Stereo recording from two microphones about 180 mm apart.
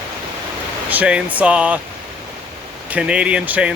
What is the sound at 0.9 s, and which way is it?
Speech, 5° right (ahead or behind).